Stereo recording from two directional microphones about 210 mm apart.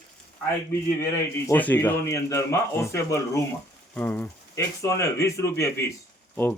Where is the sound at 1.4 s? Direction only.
10° left (ahead or behind).